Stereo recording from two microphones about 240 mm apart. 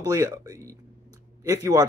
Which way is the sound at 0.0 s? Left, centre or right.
Centre.